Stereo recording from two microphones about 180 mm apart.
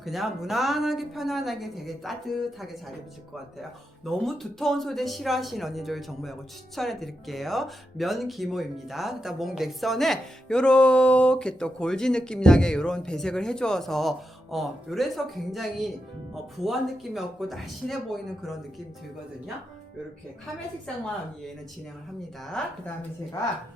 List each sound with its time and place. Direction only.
0.0 s speech: centre (ahead or behind)
22.6 s speech: 5° left (ahead or behind)